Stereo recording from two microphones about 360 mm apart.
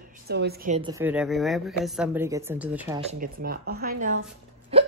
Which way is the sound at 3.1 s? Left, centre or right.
Right.